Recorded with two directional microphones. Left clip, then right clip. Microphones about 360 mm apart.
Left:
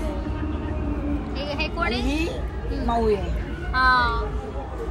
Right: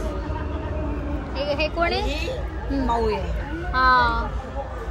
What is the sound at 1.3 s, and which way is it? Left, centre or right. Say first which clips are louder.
Speech: right 6 dB; centre.